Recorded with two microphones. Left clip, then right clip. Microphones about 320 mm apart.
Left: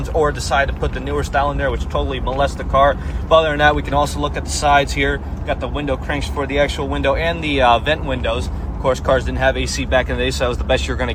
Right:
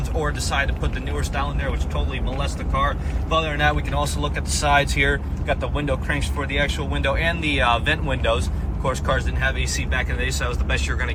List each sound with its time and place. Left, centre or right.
0.2 s speech: centre